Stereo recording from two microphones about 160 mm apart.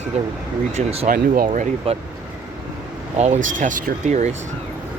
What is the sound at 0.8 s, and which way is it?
Speech, 40° right (ahead or behind).